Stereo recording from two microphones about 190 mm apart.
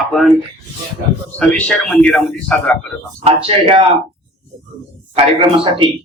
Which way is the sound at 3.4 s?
30° right (ahead or behind).